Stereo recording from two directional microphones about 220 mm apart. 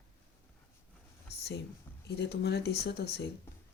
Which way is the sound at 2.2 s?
50° left (ahead or behind).